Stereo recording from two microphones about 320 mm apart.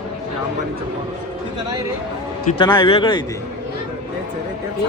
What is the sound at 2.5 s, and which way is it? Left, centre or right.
Speech, centre.